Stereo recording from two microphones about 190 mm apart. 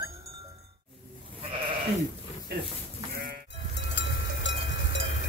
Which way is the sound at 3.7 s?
65° left (ahead or behind).